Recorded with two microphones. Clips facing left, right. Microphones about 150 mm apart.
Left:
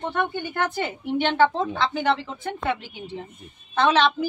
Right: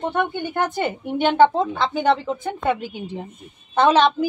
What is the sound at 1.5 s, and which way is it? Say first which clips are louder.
Speech: right 3 dB; 45° right (ahead or behind).